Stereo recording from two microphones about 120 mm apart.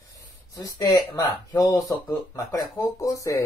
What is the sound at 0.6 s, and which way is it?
Speech, 30° left (ahead or behind).